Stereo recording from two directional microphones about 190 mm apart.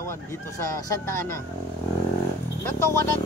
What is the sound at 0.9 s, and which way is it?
Speech, 15° left (ahead or behind).